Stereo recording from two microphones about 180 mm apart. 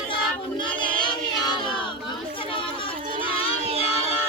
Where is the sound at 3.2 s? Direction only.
30° left (ahead or behind).